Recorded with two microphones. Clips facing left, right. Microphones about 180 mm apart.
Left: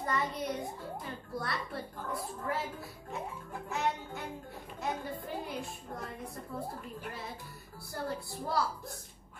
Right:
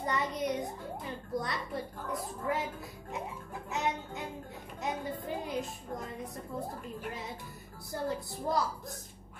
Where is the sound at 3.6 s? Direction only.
20° right (ahead or behind).